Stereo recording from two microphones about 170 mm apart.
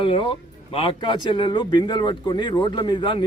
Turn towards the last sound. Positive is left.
turn(degrees=30)  # may be behind; listen again after turning